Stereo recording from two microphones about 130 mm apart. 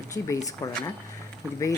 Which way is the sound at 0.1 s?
25° left (ahead or behind).